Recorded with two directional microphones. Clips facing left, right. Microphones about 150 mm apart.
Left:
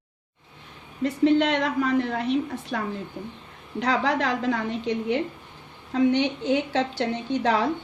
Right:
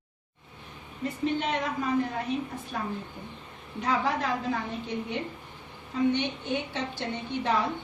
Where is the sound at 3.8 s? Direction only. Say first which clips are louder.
Left 4 dB; 90° left.